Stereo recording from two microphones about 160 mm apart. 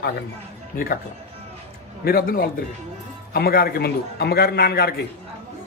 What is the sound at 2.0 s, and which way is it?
A man's voice, 65° left (ahead or behind).